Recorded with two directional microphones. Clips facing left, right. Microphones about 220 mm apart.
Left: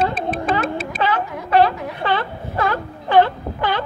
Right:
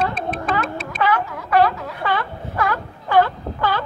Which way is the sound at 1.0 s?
25° left (ahead or behind).